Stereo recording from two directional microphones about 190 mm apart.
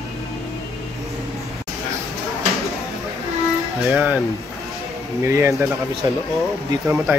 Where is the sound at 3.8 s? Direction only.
5° right (ahead or behind).